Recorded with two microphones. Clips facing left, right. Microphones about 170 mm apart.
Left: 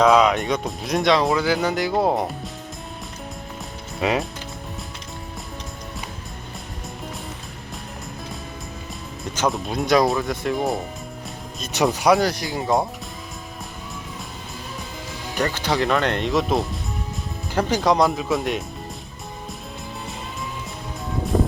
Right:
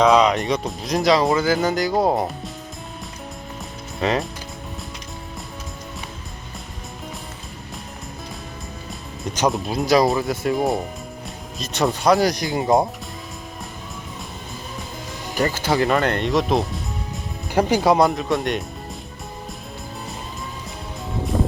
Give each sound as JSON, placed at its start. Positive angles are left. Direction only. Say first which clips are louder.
{"t": 0.0, "sound": "speech", "louder": "even", "side_deg": 0}
{"t": 4.0, "sound": "speech", "louder": "even", "side_deg": 5}
{"t": 9.5, "sound": "speech", "louder": "right 1 dB", "side_deg": -5}
{"t": 12.2, "sound": "speech", "louder": "right 3 dB", "side_deg": -20}
{"t": 15.4, "sound": "speech", "louder": "right 2 dB", "side_deg": -5}
{"t": 17.5, "sound": "speech", "louder": "right 3 dB", "side_deg": -10}